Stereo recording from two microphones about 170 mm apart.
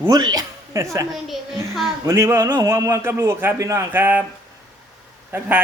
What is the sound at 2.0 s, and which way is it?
A man's voice, 15° right (ahead or behind).